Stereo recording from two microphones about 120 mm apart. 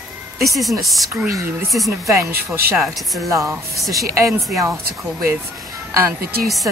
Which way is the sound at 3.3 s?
25° right (ahead or behind).